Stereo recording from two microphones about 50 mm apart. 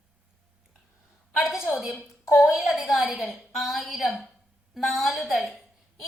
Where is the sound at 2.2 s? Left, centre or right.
Left.